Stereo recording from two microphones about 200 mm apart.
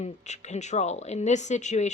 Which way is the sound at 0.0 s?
35° left (ahead or behind).